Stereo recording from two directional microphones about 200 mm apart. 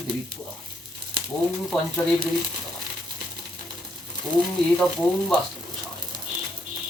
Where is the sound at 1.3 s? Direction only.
5° left (ahead or behind).